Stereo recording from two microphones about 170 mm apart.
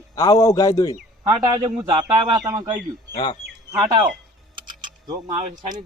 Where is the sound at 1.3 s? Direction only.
25° right (ahead or behind).